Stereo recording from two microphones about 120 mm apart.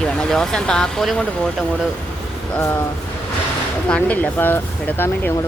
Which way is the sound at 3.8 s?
10° left (ahead or behind).